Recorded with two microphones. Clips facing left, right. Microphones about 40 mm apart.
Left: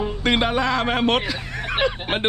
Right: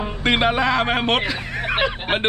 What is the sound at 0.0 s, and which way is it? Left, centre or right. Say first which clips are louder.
Speech: right 2 dB; centre.